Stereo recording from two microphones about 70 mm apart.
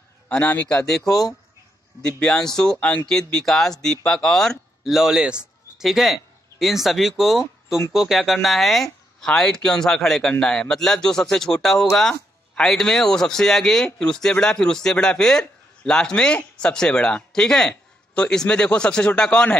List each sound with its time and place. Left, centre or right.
0.3 s a man's voice: left
0.8 s a man's voice: centre
5.9 s a man's voice: centre